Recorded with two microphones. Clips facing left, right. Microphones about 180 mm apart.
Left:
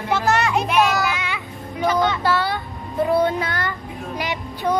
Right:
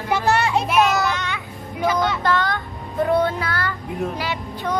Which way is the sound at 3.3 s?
20° left (ahead or behind).